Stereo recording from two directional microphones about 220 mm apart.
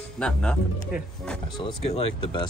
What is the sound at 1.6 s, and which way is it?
Speech, 25° left (ahead or behind).